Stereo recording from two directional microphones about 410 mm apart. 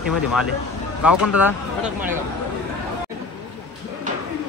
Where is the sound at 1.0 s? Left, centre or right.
Left.